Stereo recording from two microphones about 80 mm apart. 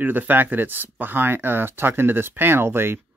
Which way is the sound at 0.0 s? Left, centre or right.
Right.